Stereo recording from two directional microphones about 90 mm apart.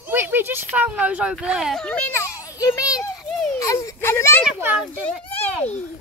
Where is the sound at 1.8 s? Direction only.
10° left (ahead or behind).